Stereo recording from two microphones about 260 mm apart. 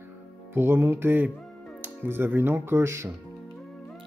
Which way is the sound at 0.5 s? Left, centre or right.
Centre.